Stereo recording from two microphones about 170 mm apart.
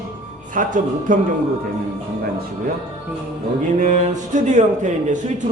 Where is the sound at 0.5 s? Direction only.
50° right (ahead or behind).